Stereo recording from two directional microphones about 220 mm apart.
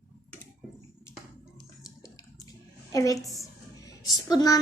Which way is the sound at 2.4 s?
15° left (ahead or behind).